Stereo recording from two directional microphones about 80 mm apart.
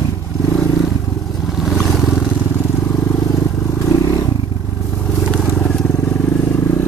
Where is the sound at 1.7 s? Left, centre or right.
Centre.